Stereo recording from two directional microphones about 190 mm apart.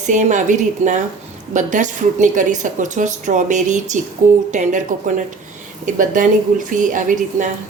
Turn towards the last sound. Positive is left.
turn(degrees=-45)  # may be behind; listen again after turning